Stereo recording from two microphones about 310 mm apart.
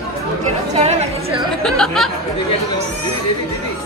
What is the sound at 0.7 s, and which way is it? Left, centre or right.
Chatter, centre.